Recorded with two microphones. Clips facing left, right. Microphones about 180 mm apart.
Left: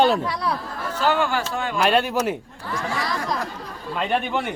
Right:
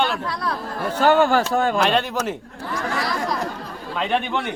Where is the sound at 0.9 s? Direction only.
50° right (ahead or behind).